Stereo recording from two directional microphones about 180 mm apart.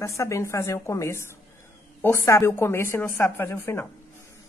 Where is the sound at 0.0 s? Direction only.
15° left (ahead or behind).